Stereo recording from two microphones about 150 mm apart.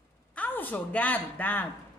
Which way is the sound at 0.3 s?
10° left (ahead or behind).